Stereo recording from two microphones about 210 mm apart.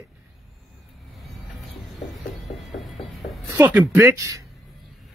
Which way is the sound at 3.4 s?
15° right (ahead or behind).